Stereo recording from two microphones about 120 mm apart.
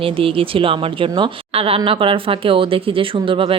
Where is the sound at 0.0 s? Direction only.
50° right (ahead or behind).